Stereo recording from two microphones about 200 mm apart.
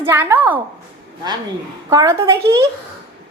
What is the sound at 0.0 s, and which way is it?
Speech, 10° right (ahead or behind).